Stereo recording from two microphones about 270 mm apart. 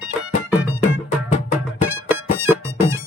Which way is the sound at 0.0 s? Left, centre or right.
Centre.